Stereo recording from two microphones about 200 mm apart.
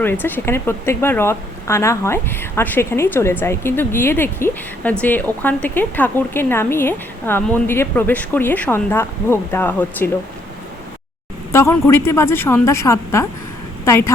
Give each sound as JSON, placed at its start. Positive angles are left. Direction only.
{"t": 0.0, "sound": "speech", "side_deg": 10}
{"t": 11.5, "sound": "speech", "side_deg": 10}